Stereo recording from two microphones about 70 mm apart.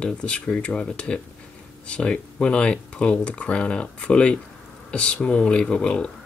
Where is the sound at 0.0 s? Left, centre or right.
Centre.